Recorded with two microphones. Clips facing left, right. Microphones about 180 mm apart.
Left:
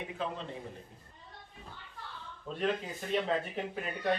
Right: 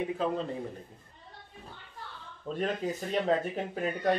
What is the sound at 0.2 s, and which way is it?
Speech, 40° right (ahead or behind).